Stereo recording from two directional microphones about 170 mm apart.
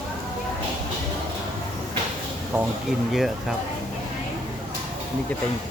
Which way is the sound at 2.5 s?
10° right (ahead or behind).